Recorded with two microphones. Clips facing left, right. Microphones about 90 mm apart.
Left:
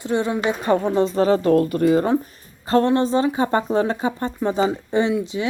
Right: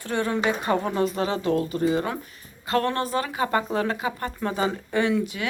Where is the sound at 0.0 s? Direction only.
20° left (ahead or behind); by 2.0 s 55° left (ahead or behind).